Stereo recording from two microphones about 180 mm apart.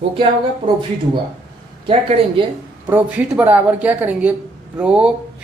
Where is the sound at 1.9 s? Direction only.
30° right (ahead or behind).